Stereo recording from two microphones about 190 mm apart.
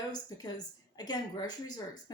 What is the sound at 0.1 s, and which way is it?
A woman's voice, 20° left (ahead or behind).